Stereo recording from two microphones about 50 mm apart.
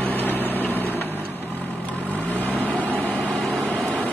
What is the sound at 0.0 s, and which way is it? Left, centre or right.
Vehicle, left.